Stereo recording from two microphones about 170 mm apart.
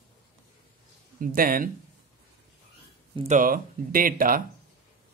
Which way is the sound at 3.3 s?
55° right (ahead or behind).